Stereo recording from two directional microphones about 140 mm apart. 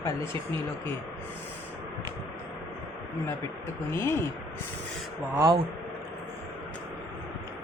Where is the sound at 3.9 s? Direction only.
15° left (ahead or behind).